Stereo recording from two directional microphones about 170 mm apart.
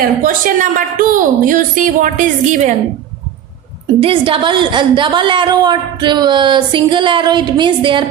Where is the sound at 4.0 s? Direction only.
35° right (ahead or behind).